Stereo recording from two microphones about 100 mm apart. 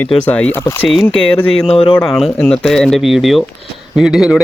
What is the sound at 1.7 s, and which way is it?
Speech, 70° left (ahead or behind).